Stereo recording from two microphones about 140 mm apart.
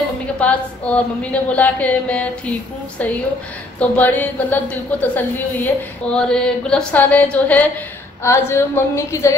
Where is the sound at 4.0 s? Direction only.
10° left (ahead or behind).